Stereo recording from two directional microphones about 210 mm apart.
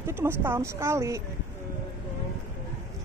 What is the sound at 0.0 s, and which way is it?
Speech, 10° right (ahead or behind).